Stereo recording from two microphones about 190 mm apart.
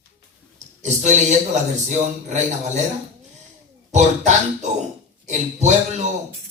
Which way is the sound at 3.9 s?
40° right (ahead or behind).